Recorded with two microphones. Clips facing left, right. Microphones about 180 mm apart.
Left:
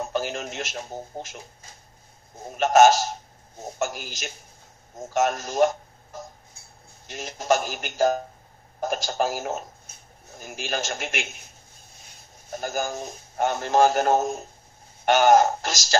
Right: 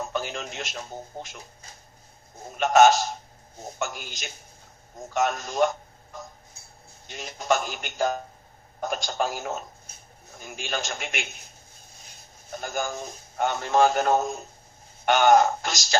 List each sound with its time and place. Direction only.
0.0 s radio: 45° left (ahead or behind)
0.7 s speech: 40° left (ahead or behind)
2.5 s speech: 40° left (ahead or behind)
5.1 s speech: 45° left (ahead or behind)
12.4 s a man's voice: 40° left (ahead or behind)